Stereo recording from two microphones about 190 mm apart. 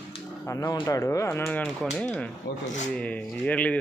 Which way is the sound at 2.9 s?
5° left (ahead or behind).